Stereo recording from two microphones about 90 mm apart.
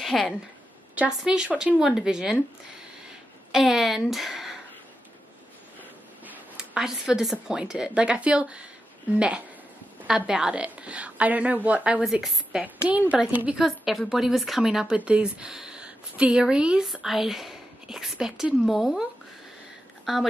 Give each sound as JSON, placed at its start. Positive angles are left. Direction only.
{"t": 0.0, "sound": "a woman's voice", "side_deg": 0}
{"t": 3.5, "sound": "a woman's voice", "side_deg": -5}
{"t": 6.5, "sound": "a woman's voice", "side_deg": -10}
{"t": 10.0, "sound": "a woman's voice", "side_deg": -5}
{"t": 12.6, "sound": "a woman's voice", "side_deg": -15}
{"t": 13.6, "sound": "a woman's voice", "side_deg": 0}
{"t": 20.1, "sound": "a woman's voice", "side_deg": -5}